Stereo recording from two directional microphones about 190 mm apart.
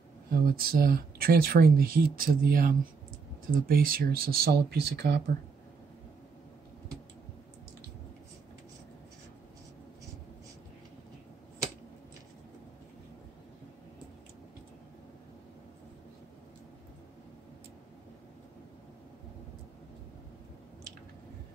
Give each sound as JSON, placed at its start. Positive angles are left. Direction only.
{"t": 0.3, "sound": "speech", "side_deg": -50}